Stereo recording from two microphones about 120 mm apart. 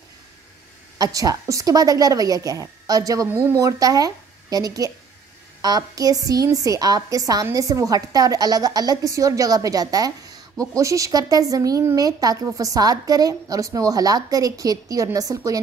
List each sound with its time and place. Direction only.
0.9 s a woman's voice: 30° right (ahead or behind)